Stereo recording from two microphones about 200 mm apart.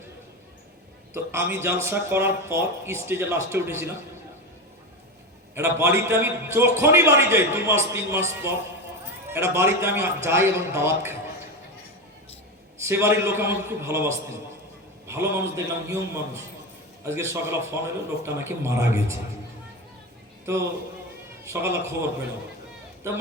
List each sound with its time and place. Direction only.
1.1 s a man's voice: 10° right (ahead or behind)
5.5 s a man's voice: 15° right (ahead or behind)
12.8 s a man's voice: 15° right (ahead or behind)
20.4 s a man's voice: 15° right (ahead or behind)